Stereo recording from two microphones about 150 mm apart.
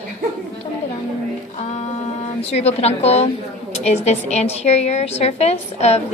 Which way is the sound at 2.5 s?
45° left (ahead or behind).